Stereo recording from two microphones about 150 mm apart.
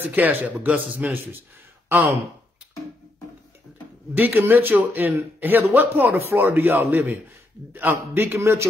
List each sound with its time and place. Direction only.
0.1 s a man's voice: 15° right (ahead or behind)
4.1 s a man's voice: 10° right (ahead or behind)